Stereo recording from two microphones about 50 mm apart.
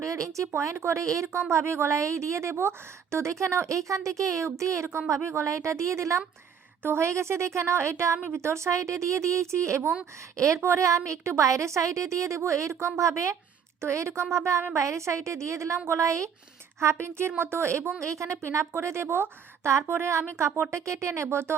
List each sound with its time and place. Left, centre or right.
0.0 s speech: right
0.5 s a woman's voice: right
4.9 s a woman's voice: right
7.0 s a woman's voice: right
10.3 s a woman's voice: right
13.8 s a woman's voice: right
16.8 s a woman's voice: right
18.0 s a woman's voice: right
20.1 s a woman's voice: right